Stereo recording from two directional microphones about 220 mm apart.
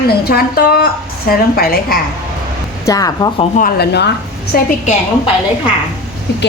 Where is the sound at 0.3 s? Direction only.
45° left (ahead or behind).